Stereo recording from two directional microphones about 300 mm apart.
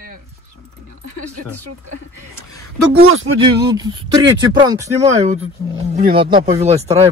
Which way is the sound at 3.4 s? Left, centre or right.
Centre.